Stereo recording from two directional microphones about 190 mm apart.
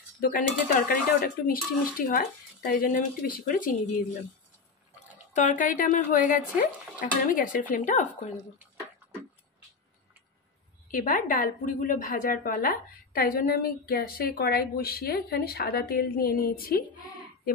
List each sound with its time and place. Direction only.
0.2 s a woman's voice: 50° left (ahead or behind)
5.3 s a woman's voice: 45° left (ahead or behind)
10.9 s a woman's voice: 45° left (ahead or behind)